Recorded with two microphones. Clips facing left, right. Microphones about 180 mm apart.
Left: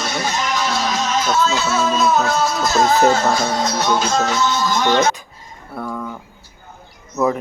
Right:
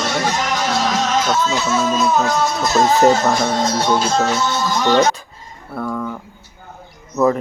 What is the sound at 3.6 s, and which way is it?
Music, 30° right (ahead or behind).